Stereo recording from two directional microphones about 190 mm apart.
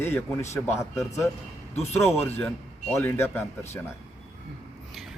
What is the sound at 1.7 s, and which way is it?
Speech, 35° left (ahead or behind).